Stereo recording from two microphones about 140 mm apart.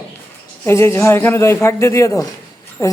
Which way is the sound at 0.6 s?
20° left (ahead or behind).